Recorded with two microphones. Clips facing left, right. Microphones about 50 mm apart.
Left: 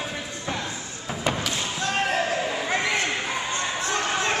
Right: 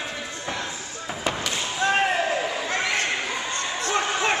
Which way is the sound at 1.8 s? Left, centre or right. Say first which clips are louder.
Right 4 dB; right.